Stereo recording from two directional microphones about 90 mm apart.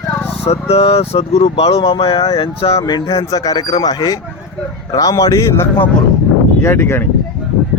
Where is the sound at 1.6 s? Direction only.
90° left.